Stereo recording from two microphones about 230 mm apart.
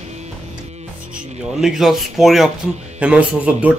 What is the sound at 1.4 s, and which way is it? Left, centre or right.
Speech, centre.